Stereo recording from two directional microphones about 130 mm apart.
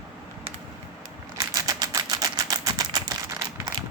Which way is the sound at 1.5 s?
30° right (ahead or behind).